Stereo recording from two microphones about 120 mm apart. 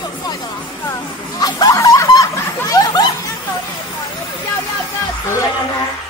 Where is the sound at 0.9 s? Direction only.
30° left (ahead or behind).